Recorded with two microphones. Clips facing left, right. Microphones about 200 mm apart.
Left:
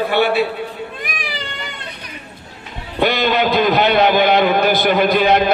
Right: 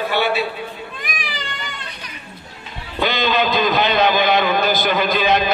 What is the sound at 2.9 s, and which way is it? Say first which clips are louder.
A man's voice: left 3 dB; 60° left (ahead or behind).